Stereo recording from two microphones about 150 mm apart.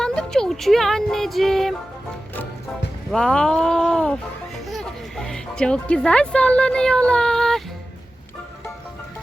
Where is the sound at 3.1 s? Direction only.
5° left (ahead or behind).